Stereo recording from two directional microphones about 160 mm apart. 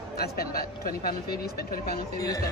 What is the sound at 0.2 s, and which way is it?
Speech, 70° left (ahead or behind).